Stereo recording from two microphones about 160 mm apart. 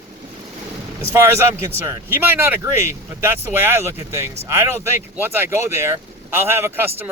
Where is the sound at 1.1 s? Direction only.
15° right (ahead or behind).